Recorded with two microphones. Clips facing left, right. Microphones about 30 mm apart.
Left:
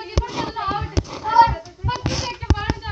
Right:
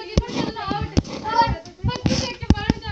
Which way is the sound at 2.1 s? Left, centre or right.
Right.